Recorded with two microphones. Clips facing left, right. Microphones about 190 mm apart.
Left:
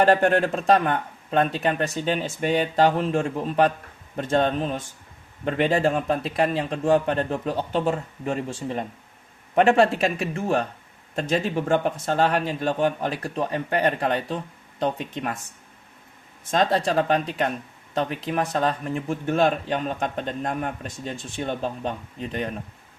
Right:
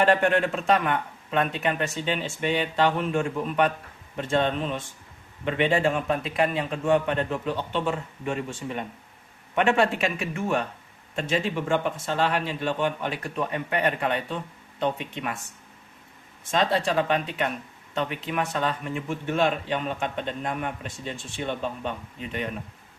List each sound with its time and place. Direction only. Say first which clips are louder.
0.0 s speech: left 3 dB; 40° left (ahead or behind)
16.5 s speech: left 2 dB; 40° left (ahead or behind)